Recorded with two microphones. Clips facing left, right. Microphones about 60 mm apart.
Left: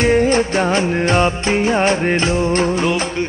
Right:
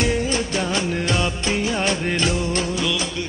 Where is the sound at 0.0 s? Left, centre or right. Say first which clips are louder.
Left 8 dB; left.